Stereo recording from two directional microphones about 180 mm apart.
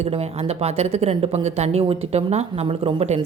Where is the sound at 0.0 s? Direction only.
35° right (ahead or behind).